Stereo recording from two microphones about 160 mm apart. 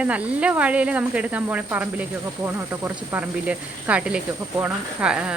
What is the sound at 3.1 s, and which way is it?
Speech, 10° right (ahead or behind).